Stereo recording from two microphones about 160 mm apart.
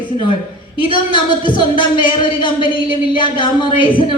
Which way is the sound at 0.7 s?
30° left (ahead or behind).